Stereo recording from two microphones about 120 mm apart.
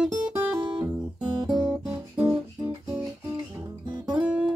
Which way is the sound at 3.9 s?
35° right (ahead or behind).